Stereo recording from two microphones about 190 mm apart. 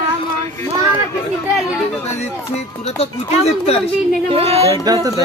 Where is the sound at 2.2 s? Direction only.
35° left (ahead or behind).